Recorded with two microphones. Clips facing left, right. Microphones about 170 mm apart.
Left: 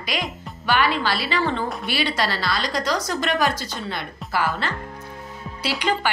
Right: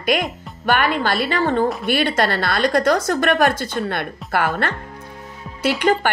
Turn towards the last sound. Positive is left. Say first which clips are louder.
# right 6 dB
turn(degrees=-50)  # may be behind; listen again after turning